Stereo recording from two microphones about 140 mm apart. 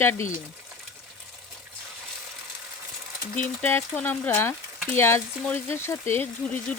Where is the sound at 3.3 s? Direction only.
10° left (ahead or behind).